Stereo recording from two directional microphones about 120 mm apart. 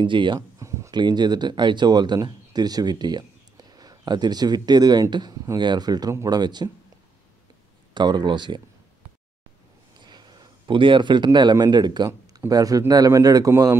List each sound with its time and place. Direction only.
0.0 s speech: 40° right (ahead or behind)
0.6 s a sound: 25° right (ahead or behind)
0.9 s speech: 40° right (ahead or behind)
7.9 s speech: 40° right (ahead or behind)
9.9 s a man's voice: 40° right (ahead or behind)